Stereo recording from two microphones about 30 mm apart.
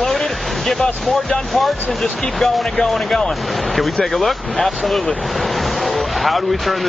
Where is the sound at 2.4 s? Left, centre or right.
Centre.